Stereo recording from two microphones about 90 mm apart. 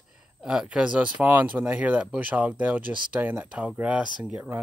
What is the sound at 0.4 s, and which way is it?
Speech, 10° right (ahead or behind).